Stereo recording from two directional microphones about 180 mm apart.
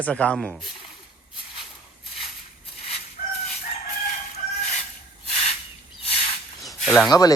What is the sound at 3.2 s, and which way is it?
Chicken, 50° left (ahead or behind).